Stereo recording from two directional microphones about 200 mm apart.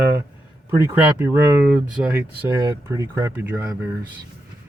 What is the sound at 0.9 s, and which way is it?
Speech, 10° right (ahead or behind).